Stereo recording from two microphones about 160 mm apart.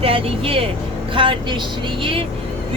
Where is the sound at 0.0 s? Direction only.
35° right (ahead or behind).